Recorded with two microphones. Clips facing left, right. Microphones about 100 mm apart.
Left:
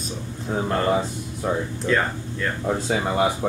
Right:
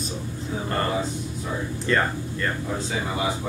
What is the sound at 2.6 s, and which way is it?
Speech, 60° left (ahead or behind).